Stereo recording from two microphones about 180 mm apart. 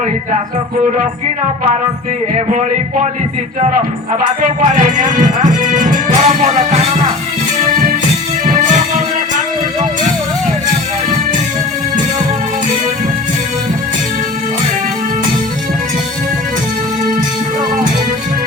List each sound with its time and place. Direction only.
4.4 s music: 45° right (ahead or behind)